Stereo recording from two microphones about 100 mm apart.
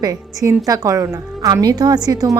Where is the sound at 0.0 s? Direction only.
35° right (ahead or behind).